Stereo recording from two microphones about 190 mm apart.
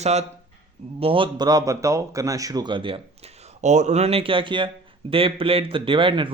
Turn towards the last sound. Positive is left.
turn(degrees=-25)  # may be behind; listen again after turning